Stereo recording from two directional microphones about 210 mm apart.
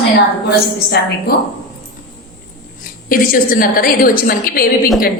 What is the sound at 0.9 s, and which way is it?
Speech, 45° left (ahead or behind).